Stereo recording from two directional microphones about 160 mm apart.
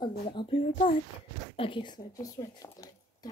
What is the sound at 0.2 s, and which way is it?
Speech, 30° left (ahead or behind).